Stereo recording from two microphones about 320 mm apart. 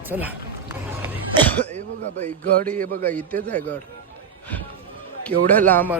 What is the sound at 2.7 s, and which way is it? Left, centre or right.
Speech, right.